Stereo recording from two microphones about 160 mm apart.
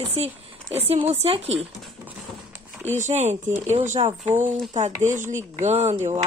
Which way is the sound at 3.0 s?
45° right (ahead or behind).